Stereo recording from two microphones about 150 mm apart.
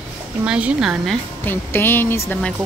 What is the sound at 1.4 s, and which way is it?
Speech, 15° left (ahead or behind).